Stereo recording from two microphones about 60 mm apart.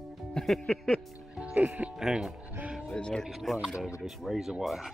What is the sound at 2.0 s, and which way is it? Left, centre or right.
Speech, centre.